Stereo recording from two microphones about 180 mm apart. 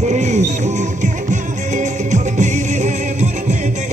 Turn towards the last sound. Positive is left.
turn(degrees=-40)  # may be behind; listen again after turning